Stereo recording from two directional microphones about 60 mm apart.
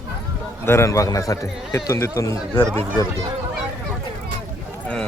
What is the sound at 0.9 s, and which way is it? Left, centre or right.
Speech, left.